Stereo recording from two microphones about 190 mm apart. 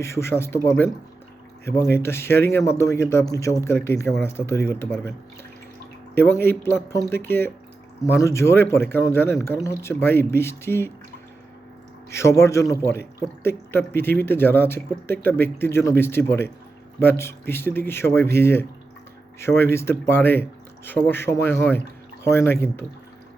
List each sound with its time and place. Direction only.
0.0 s speech: 15° left (ahead or behind)
1.9 s speech: 15° left (ahead or behind)
6.1 s speech: 10° left (ahead or behind)
12.1 s speech: 15° left (ahead or behind)